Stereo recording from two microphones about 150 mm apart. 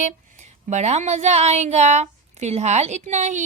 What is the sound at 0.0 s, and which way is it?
A woman's voice, 50° right (ahead or behind).